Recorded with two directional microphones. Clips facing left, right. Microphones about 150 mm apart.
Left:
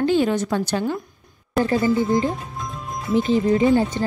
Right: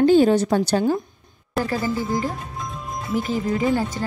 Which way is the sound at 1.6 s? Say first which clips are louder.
Left 4 dB; centre (ahead or behind).